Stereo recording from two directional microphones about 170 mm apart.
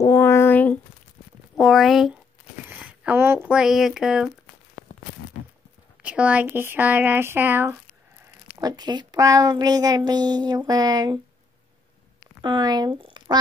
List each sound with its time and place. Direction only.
0.0 s a sound: 15° left (ahead or behind)
1.6 s speech: centre (ahead or behind)
6.0 s speech: 5° right (ahead or behind)
8.5 s a woman's voice: 25° right (ahead or behind)
12.4 s speech: 25° right (ahead or behind)